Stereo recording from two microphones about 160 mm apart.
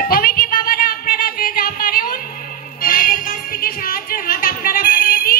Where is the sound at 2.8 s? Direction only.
60° left (ahead or behind).